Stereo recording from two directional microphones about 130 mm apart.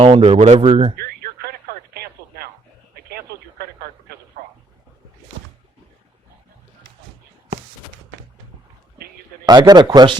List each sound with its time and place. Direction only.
0.0 s speech: 45° right (ahead or behind)
9.5 s speech: 30° right (ahead or behind)